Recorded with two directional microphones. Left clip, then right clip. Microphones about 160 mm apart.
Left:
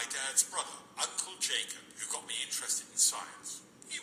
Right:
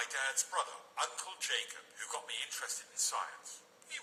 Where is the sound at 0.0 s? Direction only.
40° right (ahead or behind).